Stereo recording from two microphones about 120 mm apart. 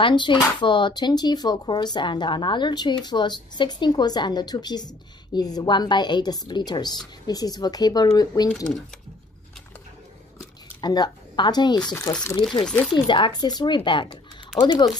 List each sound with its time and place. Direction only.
0.0 s speech: 40° left (ahead or behind)
10.8 s speech: 35° left (ahead or behind)
12.6 s speech: 5° left (ahead or behind)
12.9 s speech: 45° left (ahead or behind)